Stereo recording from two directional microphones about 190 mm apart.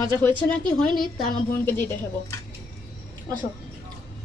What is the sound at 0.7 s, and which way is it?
A woman's voice, centre (ahead or behind).